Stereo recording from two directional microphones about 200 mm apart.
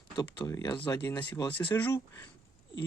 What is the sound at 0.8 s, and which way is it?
Speech, 10° left (ahead or behind).